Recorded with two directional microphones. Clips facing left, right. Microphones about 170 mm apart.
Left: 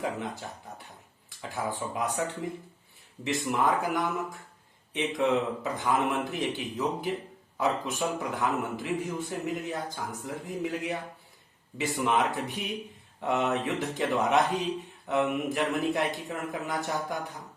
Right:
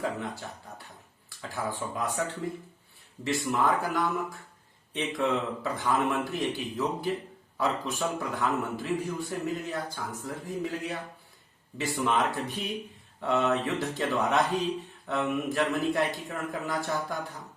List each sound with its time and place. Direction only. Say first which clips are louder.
0.0 s a man's voice: even; 20° left (ahead or behind)
3.4 s a man's voice: left 1 dB; 20° left (ahead or behind)